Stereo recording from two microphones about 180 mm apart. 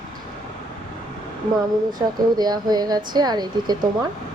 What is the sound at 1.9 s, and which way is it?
Speech, 25° right (ahead or behind).